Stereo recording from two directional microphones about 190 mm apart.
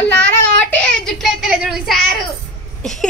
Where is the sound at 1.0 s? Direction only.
Centre (ahead or behind).